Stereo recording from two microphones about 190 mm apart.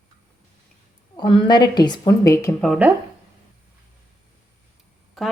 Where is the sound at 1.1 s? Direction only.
25° left (ahead or behind).